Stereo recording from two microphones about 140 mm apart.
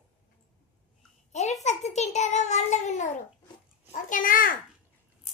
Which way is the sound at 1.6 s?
55° left (ahead or behind).